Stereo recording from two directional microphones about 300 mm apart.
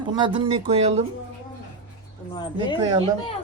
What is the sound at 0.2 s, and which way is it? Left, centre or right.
Speech, centre.